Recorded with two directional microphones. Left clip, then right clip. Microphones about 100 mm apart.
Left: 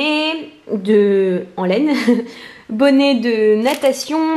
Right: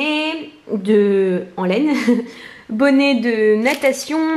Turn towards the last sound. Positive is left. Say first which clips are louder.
# left 1 dB
turn(degrees=20)  # may be behind; listen again after turning